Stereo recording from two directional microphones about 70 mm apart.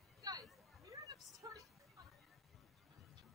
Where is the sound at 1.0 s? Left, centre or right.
Right.